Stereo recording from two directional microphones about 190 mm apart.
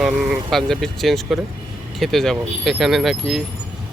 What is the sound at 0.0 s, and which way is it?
Speech, centre (ahead or behind).